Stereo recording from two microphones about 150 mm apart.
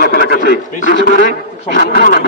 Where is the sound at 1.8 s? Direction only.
85° left.